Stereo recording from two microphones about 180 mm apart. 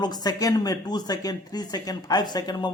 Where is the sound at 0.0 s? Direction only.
20° left (ahead or behind).